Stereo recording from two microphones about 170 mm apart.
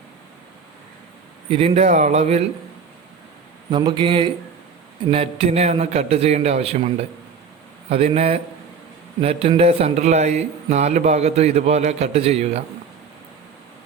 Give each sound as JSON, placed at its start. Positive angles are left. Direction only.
{"t": 1.5, "sound": "speech", "side_deg": -35}
{"t": 3.7, "sound": "speech", "side_deg": -25}